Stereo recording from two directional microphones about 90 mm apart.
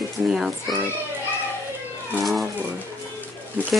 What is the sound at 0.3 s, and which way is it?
Speech, 5° right (ahead or behind).